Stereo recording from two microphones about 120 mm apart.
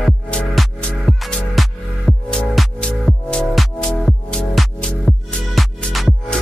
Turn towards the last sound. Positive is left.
turn(degrees=0)  # may be behind; listen again after turning